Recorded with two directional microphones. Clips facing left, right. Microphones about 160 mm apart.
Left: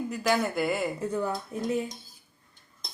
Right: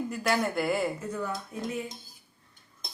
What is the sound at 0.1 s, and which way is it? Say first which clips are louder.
Speech: left 3 dB; centre (ahead or behind).